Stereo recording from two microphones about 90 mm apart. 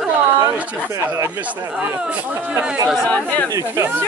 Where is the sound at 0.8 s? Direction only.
25° right (ahead or behind).